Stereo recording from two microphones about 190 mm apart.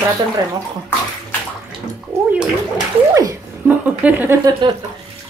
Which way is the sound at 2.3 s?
5° right (ahead or behind).